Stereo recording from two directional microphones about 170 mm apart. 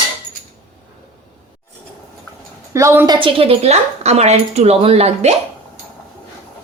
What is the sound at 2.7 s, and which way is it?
Speech, 15° right (ahead or behind).